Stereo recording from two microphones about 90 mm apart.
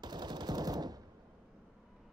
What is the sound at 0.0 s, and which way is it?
Machine gun, 55° right (ahead or behind).